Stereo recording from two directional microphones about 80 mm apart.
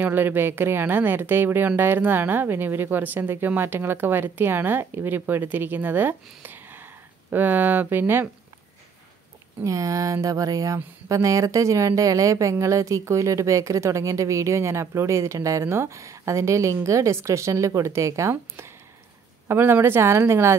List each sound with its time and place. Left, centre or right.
0.0 s speech: right
9.6 s speech: right
19.4 s speech: right